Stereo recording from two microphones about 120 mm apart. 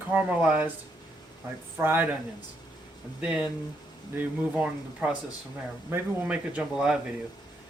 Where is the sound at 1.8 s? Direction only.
15° right (ahead or behind).